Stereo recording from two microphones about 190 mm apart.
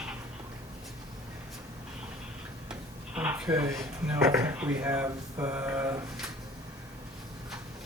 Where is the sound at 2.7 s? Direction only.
10° right (ahead or behind).